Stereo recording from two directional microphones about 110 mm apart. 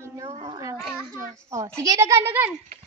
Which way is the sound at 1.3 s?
30° right (ahead or behind).